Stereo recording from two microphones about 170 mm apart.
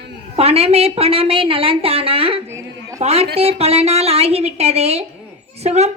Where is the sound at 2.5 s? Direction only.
20° right (ahead or behind).